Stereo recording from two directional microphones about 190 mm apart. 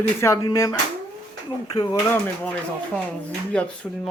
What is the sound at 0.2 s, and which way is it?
Speech, 15° left (ahead or behind).